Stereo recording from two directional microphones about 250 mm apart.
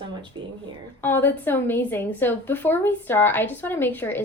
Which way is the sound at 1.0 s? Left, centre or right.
Centre.